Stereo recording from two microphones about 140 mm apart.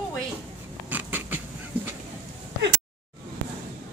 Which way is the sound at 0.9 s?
10° right (ahead or behind).